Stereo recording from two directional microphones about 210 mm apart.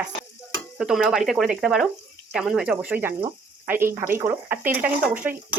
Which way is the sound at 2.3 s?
Centre (ahead or behind).